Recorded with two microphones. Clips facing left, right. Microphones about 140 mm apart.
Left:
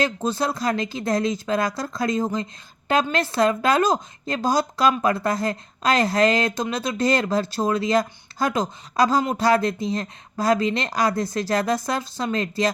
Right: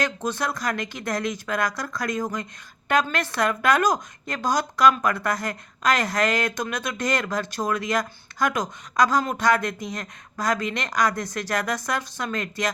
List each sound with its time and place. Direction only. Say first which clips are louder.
0.0 s speech: left 3 dB; 30° left (ahead or behind)